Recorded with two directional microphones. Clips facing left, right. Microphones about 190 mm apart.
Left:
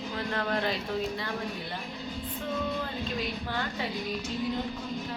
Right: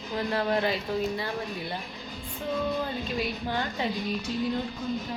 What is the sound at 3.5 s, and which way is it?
Speech, 20° right (ahead or behind).